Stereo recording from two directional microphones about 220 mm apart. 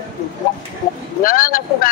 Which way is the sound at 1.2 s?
40° left (ahead or behind).